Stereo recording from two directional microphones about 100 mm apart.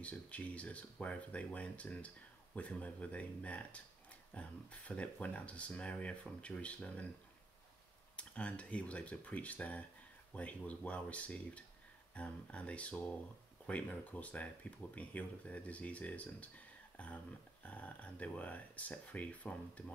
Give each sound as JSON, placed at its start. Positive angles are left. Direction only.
{"t": 0.0, "sound": "speech", "side_deg": 15}
{"t": 8.2, "sound": "speech", "side_deg": 10}